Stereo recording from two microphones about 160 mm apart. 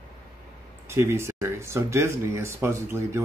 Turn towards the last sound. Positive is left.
turn(degrees=-15)  # may be behind; listen again after turning